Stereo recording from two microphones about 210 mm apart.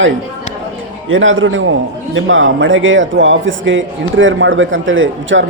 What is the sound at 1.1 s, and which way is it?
A man's voice, 70° right (ahead or behind).